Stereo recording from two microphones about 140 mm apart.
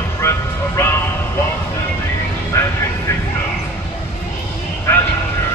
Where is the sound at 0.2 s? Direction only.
20° left (ahead or behind).